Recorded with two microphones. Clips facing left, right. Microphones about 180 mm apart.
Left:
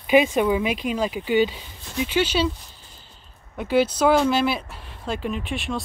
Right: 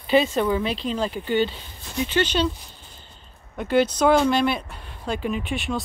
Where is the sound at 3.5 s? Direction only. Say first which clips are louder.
Even; 5° left (ahead or behind).